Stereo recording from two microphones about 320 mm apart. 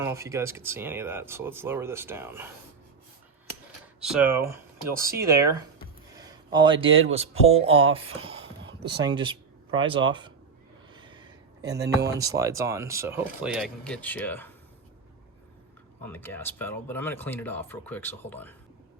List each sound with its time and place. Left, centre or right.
0.0 s speech: centre
4.0 s speech: centre
6.1 s a sound: centre
6.8 s speech: centre
7.9 s a sound: centre
9.0 s speech: centre
10.9 s a sound: centre
11.9 s speech: centre
16.0 s speech: centre